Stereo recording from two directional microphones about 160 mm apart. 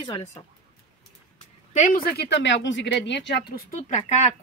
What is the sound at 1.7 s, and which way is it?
Speech, 55° left (ahead or behind).